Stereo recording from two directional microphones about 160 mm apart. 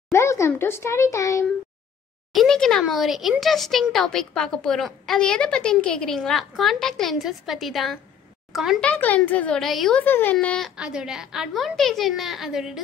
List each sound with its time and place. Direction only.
0.1 s speech: 20° left (ahead or behind)
2.3 s a child's voice: 5° left (ahead or behind)
10.8 s speech: 5° right (ahead or behind)